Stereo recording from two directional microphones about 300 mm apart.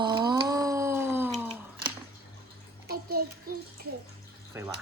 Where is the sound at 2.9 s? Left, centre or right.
Right.